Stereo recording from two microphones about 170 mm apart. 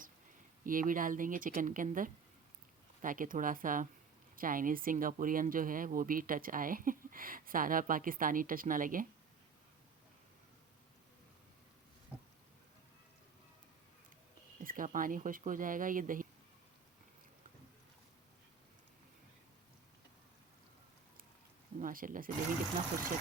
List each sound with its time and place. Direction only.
0.6 s speech: 55° right (ahead or behind)
14.6 s speech: 55° right (ahead or behind)
21.8 s speech: 55° right (ahead or behind)